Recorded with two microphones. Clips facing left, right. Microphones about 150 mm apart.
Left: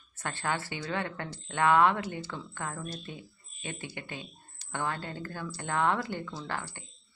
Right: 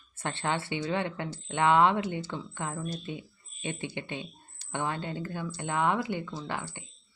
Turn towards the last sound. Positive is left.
turn(degrees=-15)  # may be behind; listen again after turning